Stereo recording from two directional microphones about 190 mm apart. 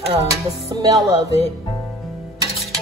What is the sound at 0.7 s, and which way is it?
Music, 20° right (ahead or behind).